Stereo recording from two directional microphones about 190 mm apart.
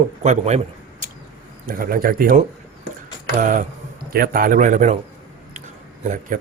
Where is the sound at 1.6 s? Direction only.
50° right (ahead or behind).